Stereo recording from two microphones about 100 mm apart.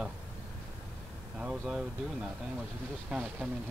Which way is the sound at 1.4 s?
10° right (ahead or behind).